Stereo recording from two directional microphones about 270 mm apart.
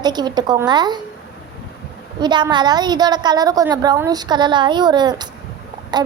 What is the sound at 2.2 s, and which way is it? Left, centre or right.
A woman's voice, centre.